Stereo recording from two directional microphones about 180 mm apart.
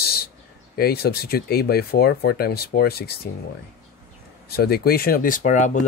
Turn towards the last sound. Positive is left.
turn(degrees=40)  # may be behind; listen again after turning